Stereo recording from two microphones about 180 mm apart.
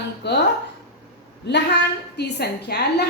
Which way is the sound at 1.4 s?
70° left (ahead or behind).